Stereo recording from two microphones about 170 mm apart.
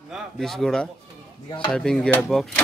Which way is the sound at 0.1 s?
Centre (ahead or behind).